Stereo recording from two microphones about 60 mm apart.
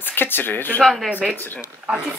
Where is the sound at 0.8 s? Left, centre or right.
Centre.